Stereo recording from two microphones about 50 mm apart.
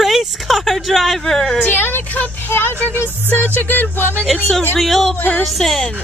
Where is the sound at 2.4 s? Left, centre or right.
Left.